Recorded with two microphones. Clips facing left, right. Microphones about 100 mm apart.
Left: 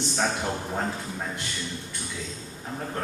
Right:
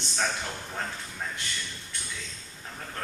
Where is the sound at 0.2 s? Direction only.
30° left (ahead or behind).